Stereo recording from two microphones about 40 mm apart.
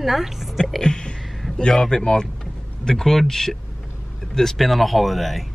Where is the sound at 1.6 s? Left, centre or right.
Centre.